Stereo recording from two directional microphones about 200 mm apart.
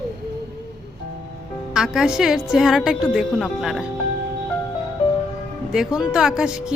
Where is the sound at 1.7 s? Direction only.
Centre (ahead or behind).